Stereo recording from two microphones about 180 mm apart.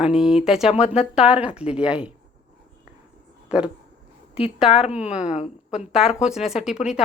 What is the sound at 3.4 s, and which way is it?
Speech, 5° right (ahead or behind).